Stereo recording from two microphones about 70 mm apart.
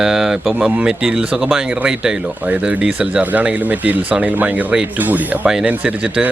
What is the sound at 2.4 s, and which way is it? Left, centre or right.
Speech, right.